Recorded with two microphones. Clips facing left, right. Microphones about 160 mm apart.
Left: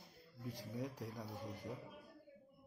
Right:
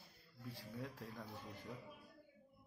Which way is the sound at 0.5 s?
15° left (ahead or behind).